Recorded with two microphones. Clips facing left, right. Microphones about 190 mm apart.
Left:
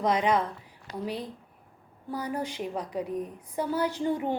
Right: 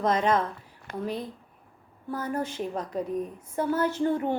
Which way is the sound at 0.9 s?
55° right (ahead or behind).